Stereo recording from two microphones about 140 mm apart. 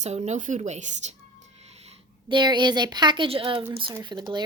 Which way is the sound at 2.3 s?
35° right (ahead or behind).